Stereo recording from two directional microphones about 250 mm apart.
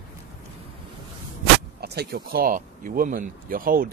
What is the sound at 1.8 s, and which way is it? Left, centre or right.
Speech, right.